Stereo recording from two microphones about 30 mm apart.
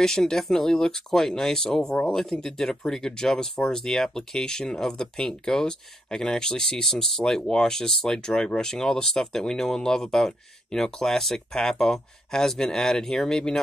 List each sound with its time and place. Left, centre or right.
0.0 s speech: centre
2.4 s speech: centre